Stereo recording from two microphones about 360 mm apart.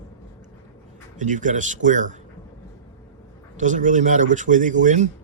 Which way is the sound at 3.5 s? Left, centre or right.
Right.